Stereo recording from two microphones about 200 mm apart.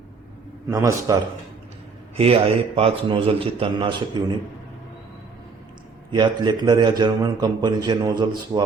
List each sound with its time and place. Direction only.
0.7 s a man's voice: 15° right (ahead or behind)
2.1 s a man's voice: 30° right (ahead or behind)
6.1 s a man's voice: 20° right (ahead or behind)